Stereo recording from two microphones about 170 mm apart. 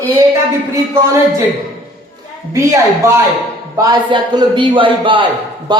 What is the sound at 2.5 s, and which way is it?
A woman's voice, 20° right (ahead or behind).